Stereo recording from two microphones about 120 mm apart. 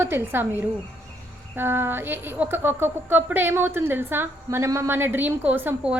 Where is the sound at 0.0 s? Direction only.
20° right (ahead or behind).